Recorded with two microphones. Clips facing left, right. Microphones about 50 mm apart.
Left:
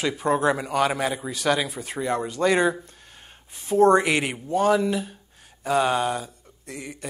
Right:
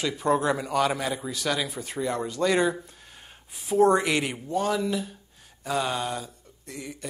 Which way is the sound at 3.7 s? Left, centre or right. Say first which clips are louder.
Left 3 dB; centre.